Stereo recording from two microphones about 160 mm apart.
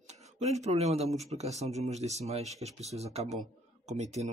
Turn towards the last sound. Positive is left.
turn(degrees=-45)  # may be behind; listen again after turning